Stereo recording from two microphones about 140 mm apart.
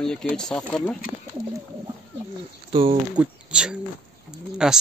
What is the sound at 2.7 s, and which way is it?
Speech, 40° right (ahead or behind).